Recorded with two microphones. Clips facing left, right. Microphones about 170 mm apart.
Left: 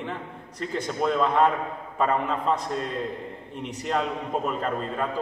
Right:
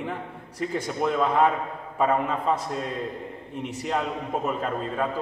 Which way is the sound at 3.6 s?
5° right (ahead or behind).